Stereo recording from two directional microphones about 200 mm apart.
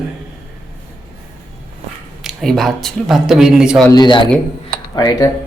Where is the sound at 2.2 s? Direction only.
Centre (ahead or behind).